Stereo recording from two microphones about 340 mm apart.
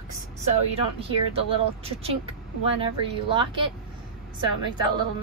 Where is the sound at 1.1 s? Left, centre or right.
Centre.